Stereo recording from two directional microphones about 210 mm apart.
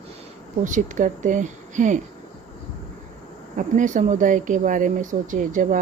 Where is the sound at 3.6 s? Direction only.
35° right (ahead or behind).